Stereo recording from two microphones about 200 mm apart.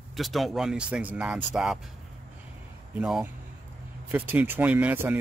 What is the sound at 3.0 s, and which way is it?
Speech, 5° right (ahead or behind).